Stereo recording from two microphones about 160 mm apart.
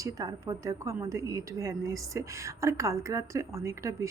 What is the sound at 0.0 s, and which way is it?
A woman's voice, 20° right (ahead or behind).